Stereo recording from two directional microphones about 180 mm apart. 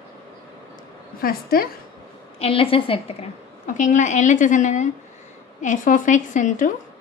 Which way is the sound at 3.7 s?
45° left (ahead or behind).